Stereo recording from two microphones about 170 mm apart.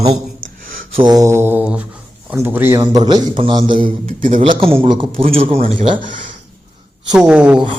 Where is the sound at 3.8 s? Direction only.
50° right (ahead or behind).